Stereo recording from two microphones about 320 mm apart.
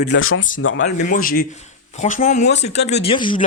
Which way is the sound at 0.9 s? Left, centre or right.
Left.